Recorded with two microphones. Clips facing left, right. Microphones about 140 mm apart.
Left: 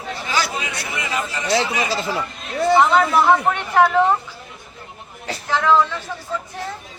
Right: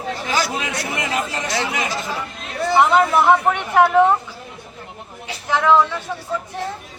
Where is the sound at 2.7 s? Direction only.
10° right (ahead or behind).